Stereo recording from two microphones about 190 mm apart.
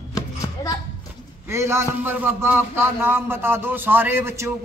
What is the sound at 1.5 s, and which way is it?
Speech, 15° right (ahead or behind).